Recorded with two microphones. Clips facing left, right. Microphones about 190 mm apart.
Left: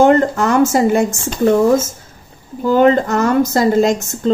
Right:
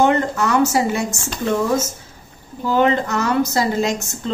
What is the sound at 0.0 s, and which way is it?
A woman's voice, 50° left (ahead or behind).